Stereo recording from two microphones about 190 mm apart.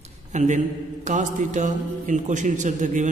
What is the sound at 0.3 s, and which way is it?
A man's voice, 40° right (ahead or behind).